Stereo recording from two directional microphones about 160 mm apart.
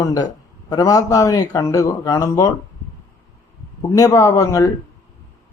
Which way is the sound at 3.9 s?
20° left (ahead or behind).